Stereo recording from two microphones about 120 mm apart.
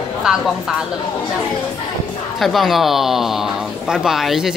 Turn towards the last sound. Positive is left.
turn(degrees=0)  # may be behind; listen again after turning